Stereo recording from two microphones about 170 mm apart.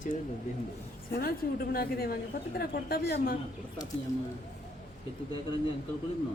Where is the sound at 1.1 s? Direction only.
60° left (ahead or behind).